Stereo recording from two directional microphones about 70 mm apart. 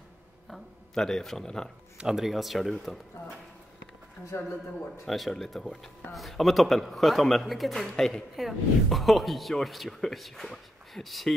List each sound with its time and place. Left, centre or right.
0.5 s speech: centre
2.0 s speech: centre
4.3 s speech: left
5.0 s speech: centre